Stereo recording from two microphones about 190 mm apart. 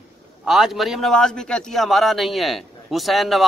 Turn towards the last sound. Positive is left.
turn(degrees=0)  # may be behind; listen again after turning